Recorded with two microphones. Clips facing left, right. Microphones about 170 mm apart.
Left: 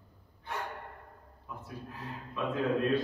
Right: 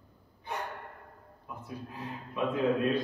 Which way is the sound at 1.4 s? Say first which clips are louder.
Right 2 dB; 15° right (ahead or behind).